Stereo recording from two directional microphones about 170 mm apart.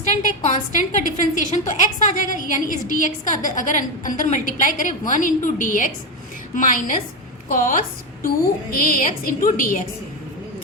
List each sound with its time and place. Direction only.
0.0 s a woman's voice: 45° left (ahead or behind)